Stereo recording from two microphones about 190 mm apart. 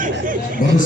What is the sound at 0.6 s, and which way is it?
Speech, 45° left (ahead or behind).